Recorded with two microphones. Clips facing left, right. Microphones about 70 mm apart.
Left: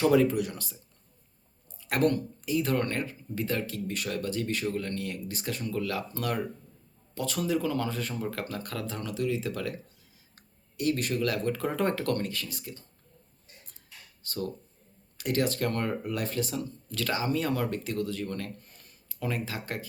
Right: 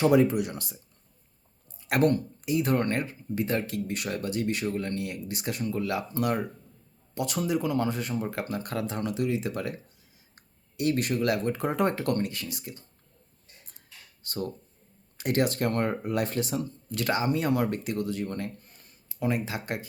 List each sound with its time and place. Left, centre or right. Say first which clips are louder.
0.0 s speech: right 1 dB; centre
1.9 s speech: right 2 dB; right
14.3 s speech: right 1 dB; right